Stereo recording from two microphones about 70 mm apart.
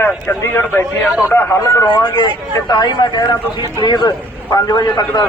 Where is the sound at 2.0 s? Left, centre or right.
Left.